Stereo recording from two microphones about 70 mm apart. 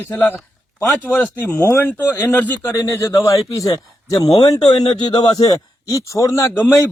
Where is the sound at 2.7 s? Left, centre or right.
Left.